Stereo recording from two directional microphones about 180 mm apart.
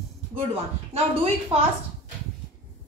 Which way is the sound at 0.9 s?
35° right (ahead or behind).